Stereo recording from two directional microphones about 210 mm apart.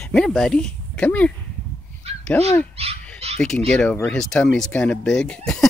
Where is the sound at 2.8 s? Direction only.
30° right (ahead or behind).